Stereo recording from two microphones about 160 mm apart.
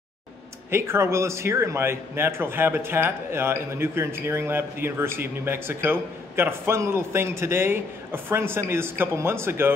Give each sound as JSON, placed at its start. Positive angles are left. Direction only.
{"t": 0.7, "sound": "speech", "side_deg": -15}